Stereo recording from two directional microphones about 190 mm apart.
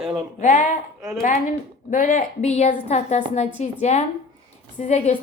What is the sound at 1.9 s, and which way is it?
Speech, 45° left (ahead or behind).